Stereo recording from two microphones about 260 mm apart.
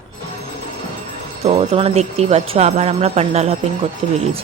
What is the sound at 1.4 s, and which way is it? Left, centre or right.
Speech, right.